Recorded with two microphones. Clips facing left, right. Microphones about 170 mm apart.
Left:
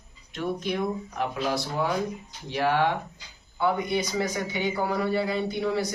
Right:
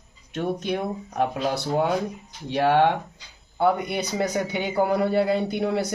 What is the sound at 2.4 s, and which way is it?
A man's voice, 65° right (ahead or behind).